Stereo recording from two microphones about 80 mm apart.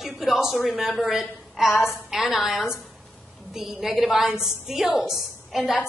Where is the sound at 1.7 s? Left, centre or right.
Left.